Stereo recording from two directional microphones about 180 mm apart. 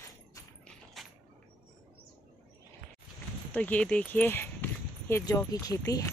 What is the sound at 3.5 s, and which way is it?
Speech, 5° left (ahead or behind).